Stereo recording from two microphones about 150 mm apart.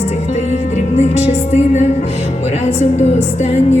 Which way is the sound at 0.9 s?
50° left (ahead or behind).